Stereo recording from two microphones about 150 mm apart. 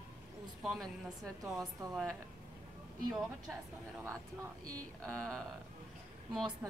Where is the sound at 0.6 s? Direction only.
Centre (ahead or behind).